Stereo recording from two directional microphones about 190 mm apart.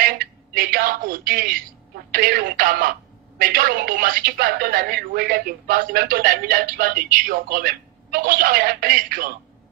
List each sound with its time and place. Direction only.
0.0 s speech: 50° right (ahead or behind)